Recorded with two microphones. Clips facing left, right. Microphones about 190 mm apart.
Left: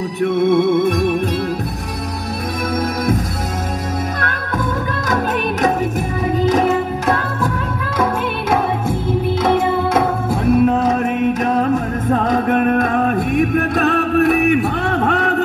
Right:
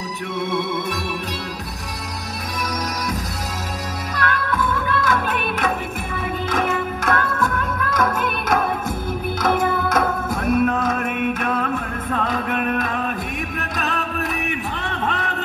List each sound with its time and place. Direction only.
0.2 s music: 55° left (ahead or behind)
4.2 s music: 45° left (ahead or behind); by 15.4 s 60° left (ahead or behind)